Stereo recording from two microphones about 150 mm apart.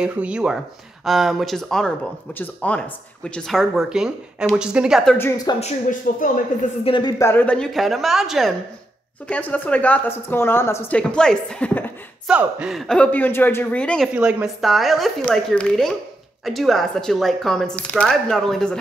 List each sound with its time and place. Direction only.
0.0 s speech: 5° right (ahead or behind)
5.6 s speech: 60° left (ahead or behind)
6.8 s speech: 30° left (ahead or behind)
7.2 s speech: 15° left (ahead or behind); by 8.5 s centre (ahead or behind)
9.3 s a woman's voice: 10° left (ahead or behind)
12.3 s a woman's voice: 10° right (ahead or behind); by 14.0 s 10° left (ahead or behind)
14.0 s speech: 5° right (ahead or behind)